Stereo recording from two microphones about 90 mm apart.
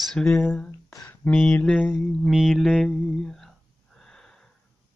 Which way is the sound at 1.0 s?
15° left (ahead or behind).